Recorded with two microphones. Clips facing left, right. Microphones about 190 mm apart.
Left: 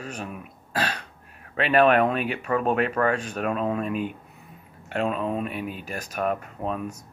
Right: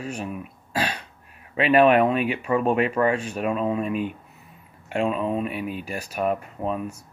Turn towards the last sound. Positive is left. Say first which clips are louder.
# right 2 dB
turn(degrees=-5)  # may be behind; listen again after turning